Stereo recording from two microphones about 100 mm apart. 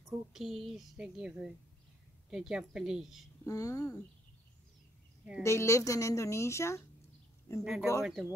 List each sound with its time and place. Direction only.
0.3 s a woman's voice: centre (ahead or behind)
3.4 s speech: 35° left (ahead or behind)
5.4 s speech: 30° left (ahead or behind)
7.6 s a woman's voice: 5° right (ahead or behind)